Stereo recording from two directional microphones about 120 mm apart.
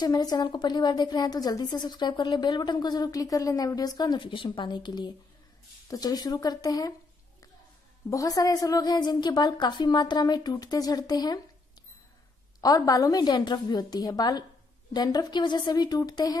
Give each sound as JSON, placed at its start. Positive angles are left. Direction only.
{"t": 0.0, "sound": "a woman's voice", "side_deg": 35}
{"t": 8.1, "sound": "a woman's voice", "side_deg": 30}
{"t": 12.5, "sound": "a woman's voice", "side_deg": 30}